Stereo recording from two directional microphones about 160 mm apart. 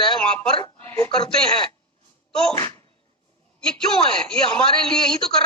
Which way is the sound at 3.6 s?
5° left (ahead or behind).